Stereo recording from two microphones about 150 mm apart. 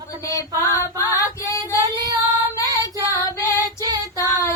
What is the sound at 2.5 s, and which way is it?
Female singing, 20° left (ahead or behind).